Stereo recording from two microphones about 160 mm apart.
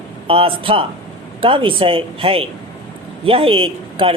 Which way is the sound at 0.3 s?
35° right (ahead or behind).